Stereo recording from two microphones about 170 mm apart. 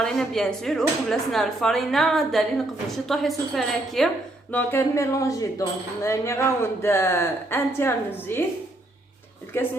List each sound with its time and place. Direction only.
0.0 s speech: 5° left (ahead or behind)
4.5 s speech: 15° left (ahead or behind)